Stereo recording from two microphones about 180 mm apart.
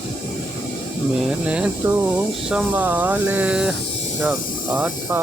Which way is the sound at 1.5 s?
5° right (ahead or behind).